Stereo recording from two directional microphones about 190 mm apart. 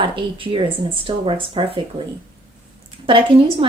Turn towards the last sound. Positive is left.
turn(degrees=-30)  # may be behind; listen again after turning